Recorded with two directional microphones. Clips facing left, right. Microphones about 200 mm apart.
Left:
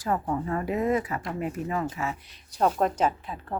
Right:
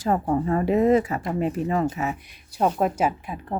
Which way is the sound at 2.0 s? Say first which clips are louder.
Right 4 dB; 15° right (ahead or behind).